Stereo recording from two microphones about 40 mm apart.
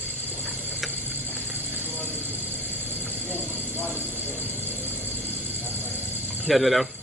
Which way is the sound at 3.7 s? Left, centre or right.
Right.